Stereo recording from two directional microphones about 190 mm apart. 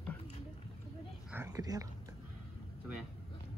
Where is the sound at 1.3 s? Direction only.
15° right (ahead or behind).